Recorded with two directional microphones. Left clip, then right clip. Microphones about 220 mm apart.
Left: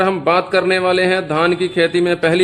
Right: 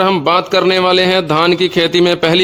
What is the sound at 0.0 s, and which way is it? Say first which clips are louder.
A man's voice: right 3 dB; 50° right (ahead or behind).